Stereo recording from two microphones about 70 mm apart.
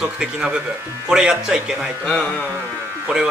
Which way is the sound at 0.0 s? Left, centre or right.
Centre.